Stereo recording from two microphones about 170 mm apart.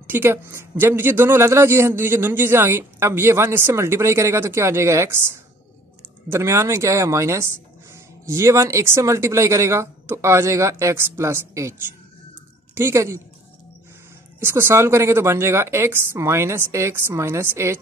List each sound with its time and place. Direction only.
0.0 s a man's voice: 10° right (ahead or behind)
12.7 s a man's voice: 15° right (ahead or behind)
14.4 s a man's voice: 15° right (ahead or behind)